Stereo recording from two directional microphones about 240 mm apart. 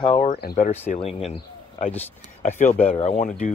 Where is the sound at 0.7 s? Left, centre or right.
Left.